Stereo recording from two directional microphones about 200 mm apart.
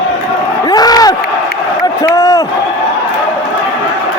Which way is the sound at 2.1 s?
20° left (ahead or behind).